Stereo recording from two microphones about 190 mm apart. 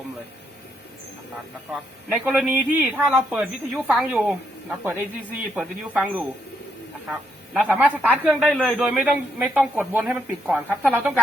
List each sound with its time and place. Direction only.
2.0 s a man's voice: centre (ahead or behind)
7.5 s a man's voice: 5° right (ahead or behind)